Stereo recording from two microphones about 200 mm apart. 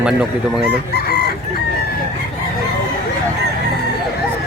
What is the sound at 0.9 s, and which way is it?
Chicken, 50° left (ahead or behind).